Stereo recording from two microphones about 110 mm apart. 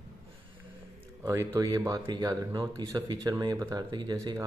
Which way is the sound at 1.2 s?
30° right (ahead or behind).